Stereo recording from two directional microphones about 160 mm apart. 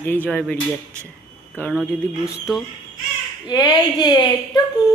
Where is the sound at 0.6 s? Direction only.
15° right (ahead or behind).